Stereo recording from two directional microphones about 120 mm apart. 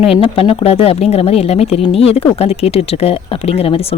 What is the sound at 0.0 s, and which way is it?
Speech, 55° left (ahead or behind).